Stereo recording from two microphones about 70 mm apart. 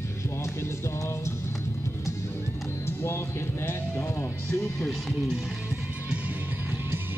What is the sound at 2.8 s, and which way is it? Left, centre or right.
Speech, left.